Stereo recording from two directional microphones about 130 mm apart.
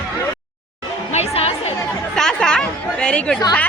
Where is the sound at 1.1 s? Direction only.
50° left (ahead or behind).